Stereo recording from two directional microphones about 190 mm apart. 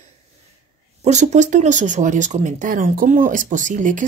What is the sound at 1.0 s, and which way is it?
Speech, 35° right (ahead or behind).